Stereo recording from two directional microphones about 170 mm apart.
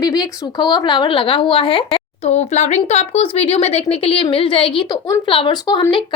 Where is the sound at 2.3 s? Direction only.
40° left (ahead or behind).